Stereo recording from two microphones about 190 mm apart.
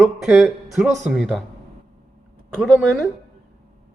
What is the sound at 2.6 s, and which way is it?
Speech, centre (ahead or behind).